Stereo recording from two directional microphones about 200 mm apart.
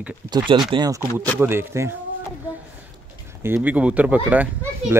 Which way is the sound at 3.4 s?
10° right (ahead or behind).